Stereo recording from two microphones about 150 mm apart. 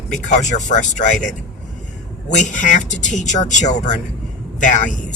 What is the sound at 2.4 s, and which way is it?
A man's voice, 60° left (ahead or behind).